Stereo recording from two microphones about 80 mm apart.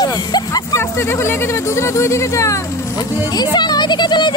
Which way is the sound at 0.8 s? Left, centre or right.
Left.